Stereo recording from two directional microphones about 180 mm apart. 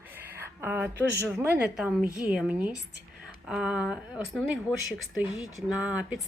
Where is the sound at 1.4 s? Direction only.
10° right (ahead or behind).